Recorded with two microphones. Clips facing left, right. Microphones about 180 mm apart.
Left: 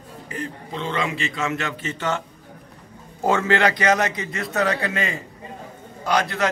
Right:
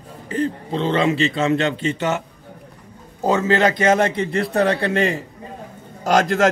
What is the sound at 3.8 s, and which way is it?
A man's voice, 25° right (ahead or behind).